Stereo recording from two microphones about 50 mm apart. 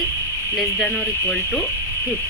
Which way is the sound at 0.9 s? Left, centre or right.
Left.